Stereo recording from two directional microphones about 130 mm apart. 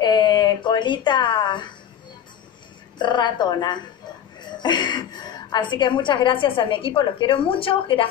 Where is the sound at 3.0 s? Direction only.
35° left (ahead or behind).